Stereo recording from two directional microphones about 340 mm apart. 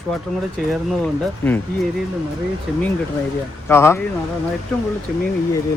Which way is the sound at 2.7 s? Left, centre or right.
Centre.